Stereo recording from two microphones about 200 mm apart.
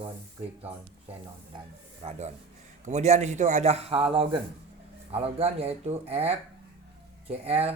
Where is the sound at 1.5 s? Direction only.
30° right (ahead or behind).